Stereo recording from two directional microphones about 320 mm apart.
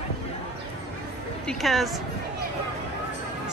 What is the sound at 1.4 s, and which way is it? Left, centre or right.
Speech, centre.